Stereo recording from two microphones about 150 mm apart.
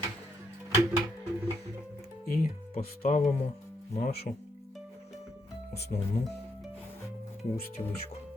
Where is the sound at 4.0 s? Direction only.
90° left.